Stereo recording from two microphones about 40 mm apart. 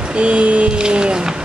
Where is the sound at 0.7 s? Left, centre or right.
Right.